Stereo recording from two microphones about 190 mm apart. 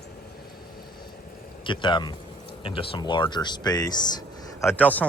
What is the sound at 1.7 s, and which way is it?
Speech, 25° left (ahead or behind).